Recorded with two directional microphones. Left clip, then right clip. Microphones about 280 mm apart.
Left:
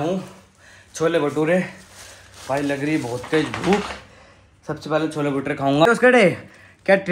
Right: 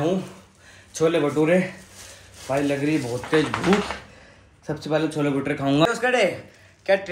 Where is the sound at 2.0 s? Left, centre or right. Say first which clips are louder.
Left 2 dB; centre.